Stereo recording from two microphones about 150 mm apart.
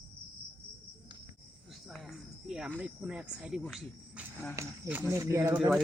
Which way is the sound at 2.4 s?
5° right (ahead or behind).